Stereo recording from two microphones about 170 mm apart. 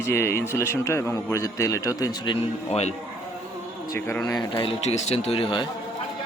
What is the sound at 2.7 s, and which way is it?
Speech, 40° left (ahead or behind).